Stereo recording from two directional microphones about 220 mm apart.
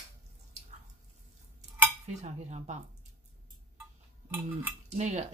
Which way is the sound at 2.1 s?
30° right (ahead or behind).